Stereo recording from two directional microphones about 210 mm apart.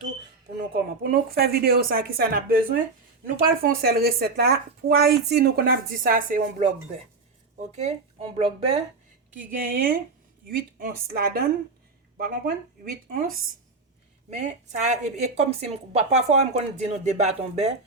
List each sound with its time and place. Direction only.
0.7 s speech: 45° right (ahead or behind)
7.8 s speech: 30° right (ahead or behind)
9.6 s a woman's voice: 40° right (ahead or behind)